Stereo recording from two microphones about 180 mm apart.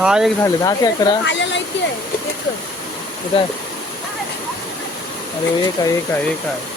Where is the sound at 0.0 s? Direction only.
5° right (ahead or behind).